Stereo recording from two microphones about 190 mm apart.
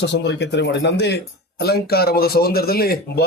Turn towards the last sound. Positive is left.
turn(degrees=55)  # may be behind; listen again after turning